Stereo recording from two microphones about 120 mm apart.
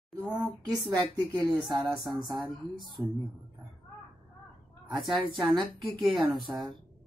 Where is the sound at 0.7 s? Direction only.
35° right (ahead or behind).